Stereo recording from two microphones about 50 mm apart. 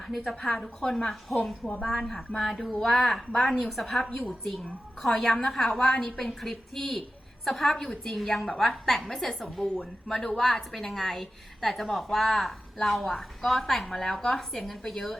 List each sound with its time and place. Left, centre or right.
0.3 s a woman's voice: centre